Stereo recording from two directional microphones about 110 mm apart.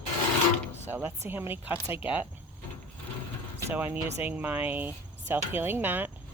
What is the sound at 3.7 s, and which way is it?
Speech, 15° right (ahead or behind).